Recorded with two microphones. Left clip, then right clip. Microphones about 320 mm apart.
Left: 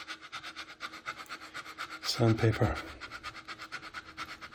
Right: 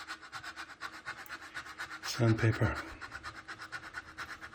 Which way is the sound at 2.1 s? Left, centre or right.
Centre.